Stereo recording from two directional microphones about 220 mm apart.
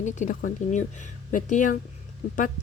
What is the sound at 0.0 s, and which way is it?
Speech, 35° left (ahead or behind).